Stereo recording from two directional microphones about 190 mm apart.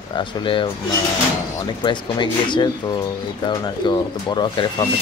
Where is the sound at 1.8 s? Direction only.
25° left (ahead or behind).